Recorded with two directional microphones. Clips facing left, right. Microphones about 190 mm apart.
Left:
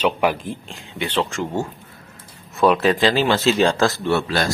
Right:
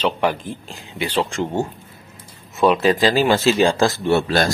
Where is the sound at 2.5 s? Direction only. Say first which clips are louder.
Right 1 dB; centre (ahead or behind).